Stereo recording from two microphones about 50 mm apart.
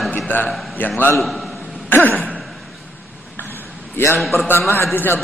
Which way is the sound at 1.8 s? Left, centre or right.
Left.